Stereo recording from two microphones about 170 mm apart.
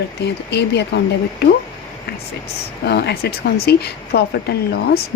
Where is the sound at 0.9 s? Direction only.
80° left.